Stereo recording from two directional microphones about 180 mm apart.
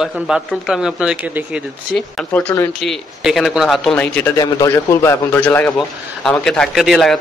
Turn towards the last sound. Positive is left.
turn(degrees=0)  # may be behind; listen again after turning